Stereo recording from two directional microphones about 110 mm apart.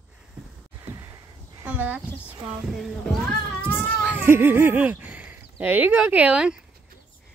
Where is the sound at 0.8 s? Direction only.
30° right (ahead or behind).